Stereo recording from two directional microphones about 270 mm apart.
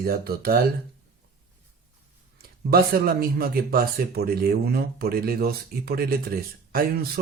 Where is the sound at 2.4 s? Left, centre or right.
Right.